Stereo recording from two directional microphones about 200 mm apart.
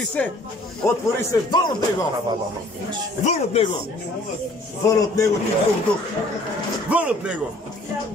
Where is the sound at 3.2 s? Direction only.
30° left (ahead or behind).